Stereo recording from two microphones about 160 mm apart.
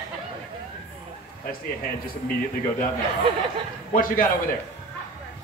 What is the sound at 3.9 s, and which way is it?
Speech, 60° left (ahead or behind).